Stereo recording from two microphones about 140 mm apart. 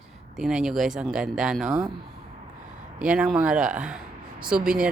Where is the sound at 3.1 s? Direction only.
5° right (ahead or behind).